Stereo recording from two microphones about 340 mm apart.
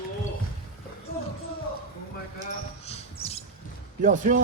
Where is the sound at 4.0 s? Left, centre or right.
Right.